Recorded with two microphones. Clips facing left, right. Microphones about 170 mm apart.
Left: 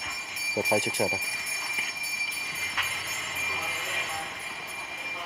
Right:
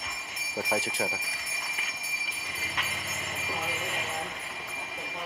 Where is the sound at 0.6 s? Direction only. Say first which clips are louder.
Left 4 dB; 20° left (ahead or behind).